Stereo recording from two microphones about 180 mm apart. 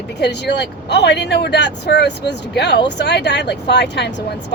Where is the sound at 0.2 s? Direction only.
70° left (ahead or behind).